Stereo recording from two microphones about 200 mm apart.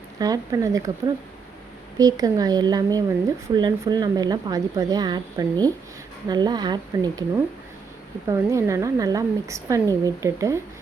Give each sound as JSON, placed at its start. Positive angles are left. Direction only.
{"t": 0.2, "sound": "speech", "side_deg": -20}